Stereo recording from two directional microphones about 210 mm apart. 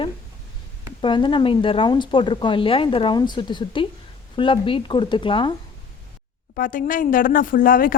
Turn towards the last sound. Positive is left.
turn(degrees=40)  # may be behind; listen again after turning